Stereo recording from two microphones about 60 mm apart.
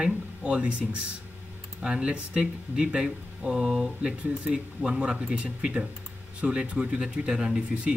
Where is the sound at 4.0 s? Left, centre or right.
Centre.